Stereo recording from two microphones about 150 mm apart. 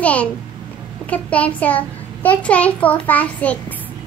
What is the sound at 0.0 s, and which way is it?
A child's voice, 10° left (ahead or behind).